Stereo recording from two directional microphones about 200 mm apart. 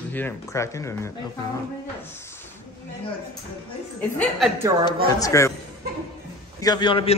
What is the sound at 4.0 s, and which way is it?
Speech, 5° left (ahead or behind).